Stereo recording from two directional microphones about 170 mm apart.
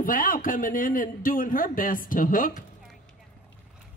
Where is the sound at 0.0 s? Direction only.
55° left (ahead or behind).